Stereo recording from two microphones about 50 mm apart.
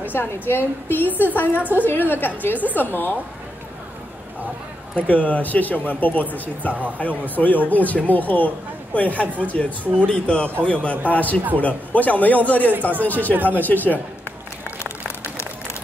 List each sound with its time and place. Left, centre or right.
0.0 s a woman's voice: left
1.6 s speech: right
1.9 s a woman's voice: left
4.9 s a woman's voice: left
13.3 s speech: right
13.6 s a woman's voice: left